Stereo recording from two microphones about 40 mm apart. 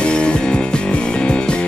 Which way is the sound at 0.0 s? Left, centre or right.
Left.